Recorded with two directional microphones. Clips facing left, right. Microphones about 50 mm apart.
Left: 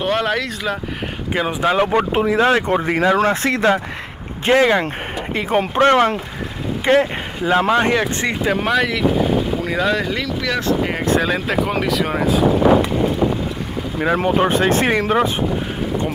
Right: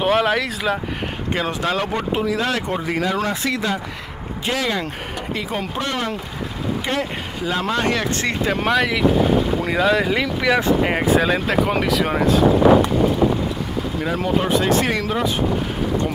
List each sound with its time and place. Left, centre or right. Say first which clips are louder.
0.0 s speech: right 1 dB; centre
1.3 s speech: left 4 dB; centre
1.9 s speech: left 5 dB; left
6.8 s speech: left 12 dB; left; by 8.4 s centre
8.5 s speech: left 1 dB; centre
11.1 s speech: even; centre
14.0 s speech: left 5 dB; left